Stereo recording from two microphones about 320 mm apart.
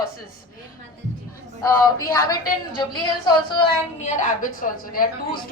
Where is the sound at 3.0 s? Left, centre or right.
Centre.